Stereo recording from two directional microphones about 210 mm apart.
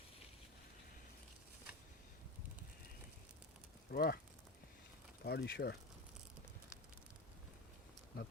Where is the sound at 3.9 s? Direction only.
45° left (ahead or behind).